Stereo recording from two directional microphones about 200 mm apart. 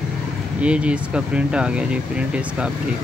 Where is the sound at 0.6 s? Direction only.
5° right (ahead or behind).